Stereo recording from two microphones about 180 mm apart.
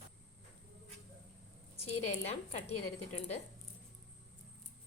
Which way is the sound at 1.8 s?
35° left (ahead or behind).